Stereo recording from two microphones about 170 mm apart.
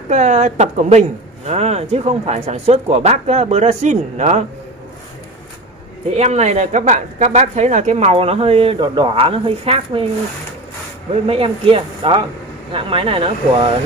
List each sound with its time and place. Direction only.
0.1 s speech: 45° right (ahead or behind)
6.0 s speech: 40° right (ahead or behind)
11.2 s speech: 35° right (ahead or behind)